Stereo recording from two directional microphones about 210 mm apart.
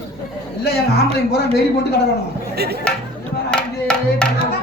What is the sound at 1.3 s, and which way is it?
Speech, 50° left (ahead or behind).